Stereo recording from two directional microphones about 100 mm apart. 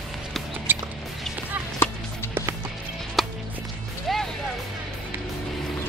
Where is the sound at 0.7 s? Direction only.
20° right (ahead or behind).